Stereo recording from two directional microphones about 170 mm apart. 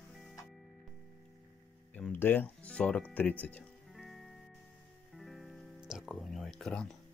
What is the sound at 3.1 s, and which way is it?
Music, 10° left (ahead or behind).